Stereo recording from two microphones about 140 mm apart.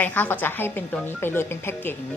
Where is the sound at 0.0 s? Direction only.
10° left (ahead or behind).